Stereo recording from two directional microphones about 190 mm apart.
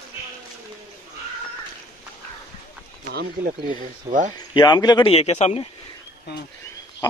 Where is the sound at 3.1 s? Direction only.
45° right (ahead or behind).